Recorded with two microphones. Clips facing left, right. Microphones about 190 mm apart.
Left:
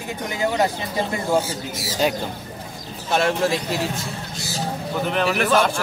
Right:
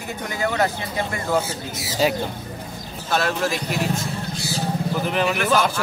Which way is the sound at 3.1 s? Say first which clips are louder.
Left 2 dB; 25° left (ahead or behind).